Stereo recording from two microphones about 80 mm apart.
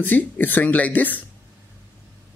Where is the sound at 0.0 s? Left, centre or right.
Left.